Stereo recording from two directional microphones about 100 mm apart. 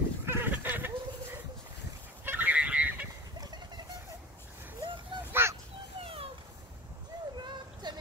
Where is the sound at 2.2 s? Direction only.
20° right (ahead or behind).